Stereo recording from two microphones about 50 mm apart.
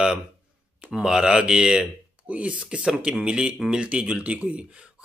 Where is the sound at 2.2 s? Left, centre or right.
Right.